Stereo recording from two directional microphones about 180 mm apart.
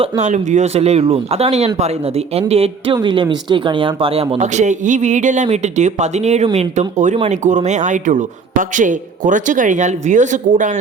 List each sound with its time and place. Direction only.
0.0 s speech: 40° right (ahead or behind)